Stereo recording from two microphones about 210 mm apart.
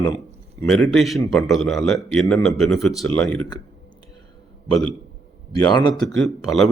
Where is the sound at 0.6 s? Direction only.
5° left (ahead or behind).